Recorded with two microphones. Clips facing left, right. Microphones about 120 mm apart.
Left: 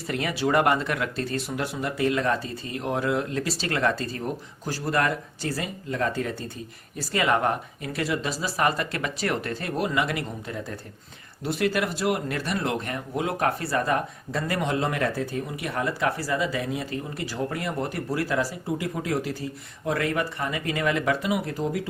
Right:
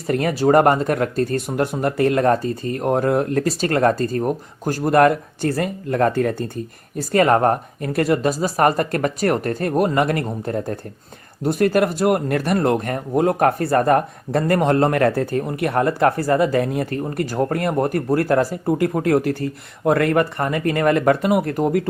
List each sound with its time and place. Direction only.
0.1 s speech: 45° right (ahead or behind)